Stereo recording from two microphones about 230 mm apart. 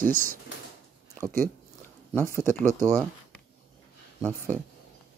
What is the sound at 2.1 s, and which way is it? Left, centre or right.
Speech, centre.